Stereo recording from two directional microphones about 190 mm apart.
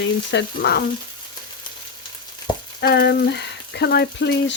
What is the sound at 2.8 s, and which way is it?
Frying, 60° left (ahead or behind).